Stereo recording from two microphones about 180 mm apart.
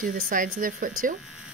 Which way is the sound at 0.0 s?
50° right (ahead or behind).